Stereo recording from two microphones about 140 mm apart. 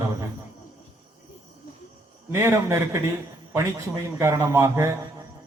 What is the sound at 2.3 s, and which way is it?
Speech, 20° right (ahead or behind).